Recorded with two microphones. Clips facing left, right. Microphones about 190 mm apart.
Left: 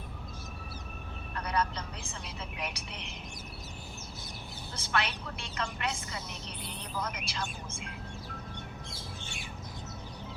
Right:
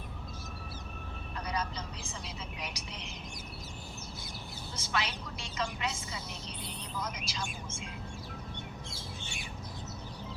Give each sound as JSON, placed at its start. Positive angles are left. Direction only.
{"t": 1.4, "sound": "vehicle", "side_deg": 60}
{"t": 4.8, "sound": "a woman's voice", "side_deg": 60}